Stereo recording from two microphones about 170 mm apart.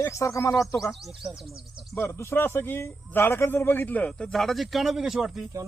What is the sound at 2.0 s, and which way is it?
A man's voice, 15° left (ahead or behind).